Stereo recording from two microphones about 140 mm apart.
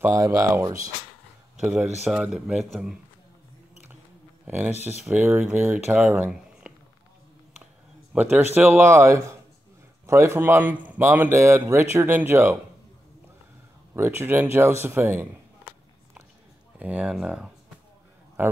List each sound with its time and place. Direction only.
0.0 s speech: 25° right (ahead or behind)
2.0 s speech: 5° right (ahead or behind)
4.5 s speech: 15° right (ahead or behind)
8.1 s speech: 15° right (ahead or behind)
13.9 s speech: 15° right (ahead or behind)
16.7 s a man's voice: 10° right (ahead or behind)